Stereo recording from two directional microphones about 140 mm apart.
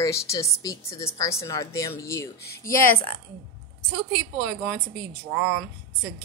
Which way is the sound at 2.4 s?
90° left.